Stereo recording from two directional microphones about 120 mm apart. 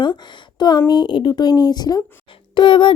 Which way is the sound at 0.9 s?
40° left (ahead or behind).